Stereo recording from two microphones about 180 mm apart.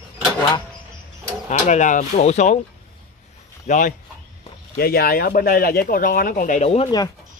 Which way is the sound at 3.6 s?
45° left (ahead or behind).